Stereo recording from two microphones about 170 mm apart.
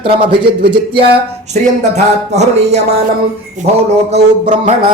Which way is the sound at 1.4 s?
40° right (ahead or behind).